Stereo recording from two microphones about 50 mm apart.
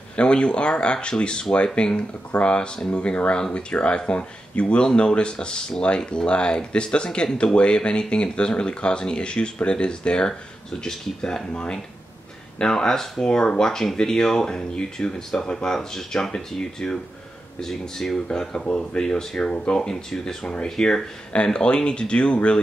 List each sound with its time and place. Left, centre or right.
0.1 s speech: left